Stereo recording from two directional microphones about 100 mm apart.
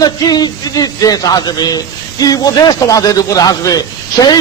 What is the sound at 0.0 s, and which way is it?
A man's voice, 40° left (ahead or behind).